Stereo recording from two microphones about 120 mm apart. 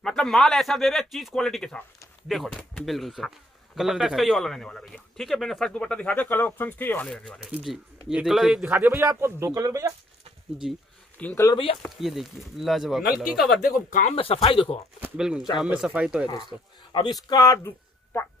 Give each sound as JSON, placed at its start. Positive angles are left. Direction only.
{"t": 0.0, "sound": "speech", "side_deg": 5}
{"t": 8.1, "sound": "speech", "side_deg": -5}
{"t": 8.6, "sound": "speech", "side_deg": -15}
{"t": 10.6, "sound": "speech", "side_deg": -5}
{"t": 11.2, "sound": "speech", "side_deg": 10}
{"t": 11.8, "sound": "speech", "side_deg": 0}
{"t": 13.8, "sound": "speech", "side_deg": 90}
{"t": 14.1, "sound": "speech", "side_deg": 50}
{"t": 15.1, "sound": "speech", "side_deg": -5}
{"t": 16.9, "sound": "a man's voice", "side_deg": 35}